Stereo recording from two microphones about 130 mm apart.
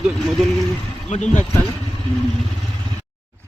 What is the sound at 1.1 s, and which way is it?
Speech, 65° left (ahead or behind).